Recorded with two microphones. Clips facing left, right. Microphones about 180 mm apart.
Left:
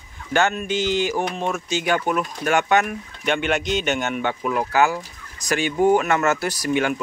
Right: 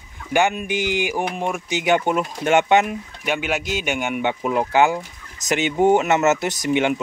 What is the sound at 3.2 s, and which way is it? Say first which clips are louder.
Speech: left 2 dB; 5° right (ahead or behind).